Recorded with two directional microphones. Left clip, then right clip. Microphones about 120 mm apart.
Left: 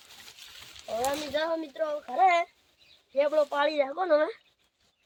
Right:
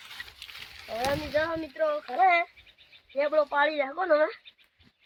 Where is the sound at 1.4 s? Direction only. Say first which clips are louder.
Right 3 dB; 75° left (ahead or behind); by 4.3 s 55° left (ahead or behind).